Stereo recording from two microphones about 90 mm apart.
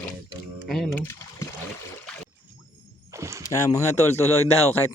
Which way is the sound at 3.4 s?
35° left (ahead or behind).